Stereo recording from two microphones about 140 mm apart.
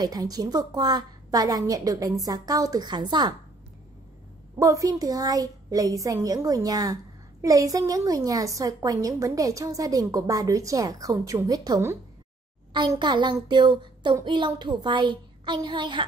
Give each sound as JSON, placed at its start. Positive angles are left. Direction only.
{"t": 0.0, "sound": "a woman's voice", "side_deg": -30}
{"t": 4.6, "sound": "a woman's voice", "side_deg": -25}
{"t": 12.7, "sound": "a child's voice", "side_deg": -35}